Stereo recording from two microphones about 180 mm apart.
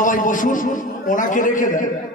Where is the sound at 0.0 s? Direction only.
45° left (ahead or behind).